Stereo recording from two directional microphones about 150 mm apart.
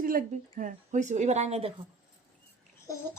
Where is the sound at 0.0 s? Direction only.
70° right (ahead or behind).